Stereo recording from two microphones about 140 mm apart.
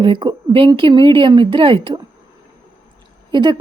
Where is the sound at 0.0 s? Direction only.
35° right (ahead or behind).